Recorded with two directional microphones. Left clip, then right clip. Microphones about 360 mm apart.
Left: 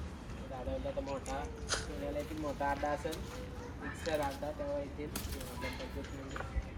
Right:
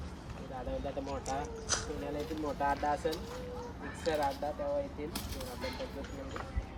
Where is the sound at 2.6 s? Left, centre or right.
Right.